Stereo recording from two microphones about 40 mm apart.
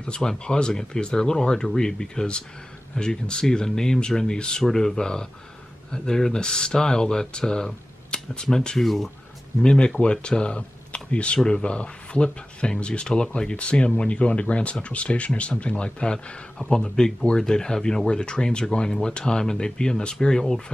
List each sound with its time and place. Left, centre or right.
0.0 s speech: left; by 9.1 s centre
9.6 s speech: left
18.0 s speech: left